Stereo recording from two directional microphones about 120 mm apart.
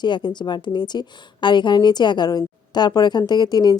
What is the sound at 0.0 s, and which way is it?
A woman's voice, 40° left (ahead or behind).